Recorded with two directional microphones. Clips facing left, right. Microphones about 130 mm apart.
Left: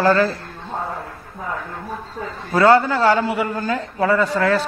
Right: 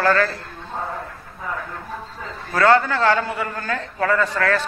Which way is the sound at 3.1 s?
15° left (ahead or behind).